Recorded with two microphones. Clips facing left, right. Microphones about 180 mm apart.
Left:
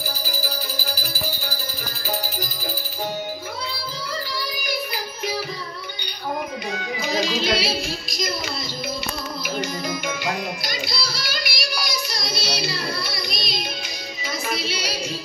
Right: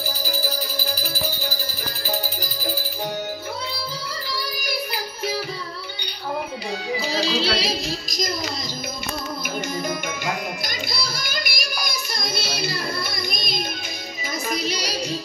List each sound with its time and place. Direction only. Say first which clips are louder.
6.7 s music: right 1 dB; 30° right (ahead or behind)
9.6 s music: right 1 dB; 50° right (ahead or behind)